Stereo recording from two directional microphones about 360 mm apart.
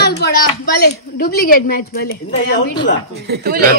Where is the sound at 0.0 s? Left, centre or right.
Left.